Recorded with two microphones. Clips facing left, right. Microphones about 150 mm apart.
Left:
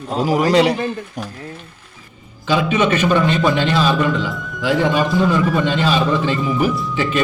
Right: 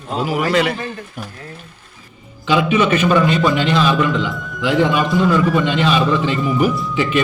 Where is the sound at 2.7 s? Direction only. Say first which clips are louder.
Even; 10° right (ahead or behind).